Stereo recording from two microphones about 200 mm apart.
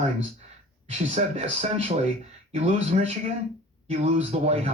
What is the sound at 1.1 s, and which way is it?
Speech, 30° right (ahead or behind).